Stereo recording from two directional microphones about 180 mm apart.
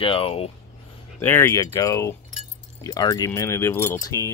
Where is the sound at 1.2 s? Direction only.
10° left (ahead or behind).